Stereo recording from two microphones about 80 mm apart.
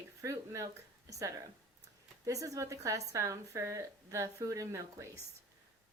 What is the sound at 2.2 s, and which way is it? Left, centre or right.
A woman's voice, right.